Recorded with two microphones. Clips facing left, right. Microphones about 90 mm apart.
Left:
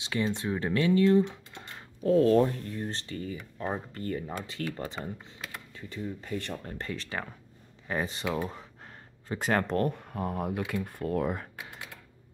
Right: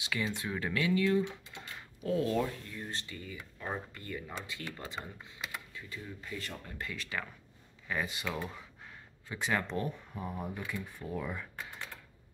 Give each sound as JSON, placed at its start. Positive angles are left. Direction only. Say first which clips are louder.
{"t": 0.0, "sound": "speech", "louder": "left 5 dB", "side_deg": 30}
{"t": 6.2, "sound": "speech", "louder": "left 7 dB", "side_deg": 55}
{"t": 6.5, "sound": "speech", "louder": "left 6 dB", "side_deg": 40}